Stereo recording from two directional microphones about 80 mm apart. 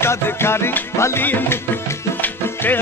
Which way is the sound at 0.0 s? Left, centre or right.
Left.